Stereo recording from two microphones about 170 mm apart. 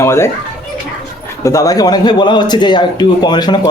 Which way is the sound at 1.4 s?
20° left (ahead or behind).